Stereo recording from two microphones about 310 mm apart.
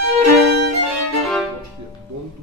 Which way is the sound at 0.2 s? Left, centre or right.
Right.